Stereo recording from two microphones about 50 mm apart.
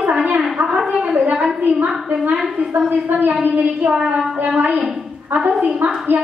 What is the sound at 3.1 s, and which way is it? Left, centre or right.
A woman's voice, right.